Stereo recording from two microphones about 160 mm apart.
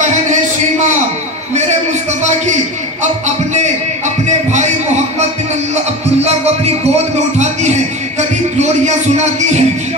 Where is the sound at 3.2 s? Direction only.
50° right (ahead or behind).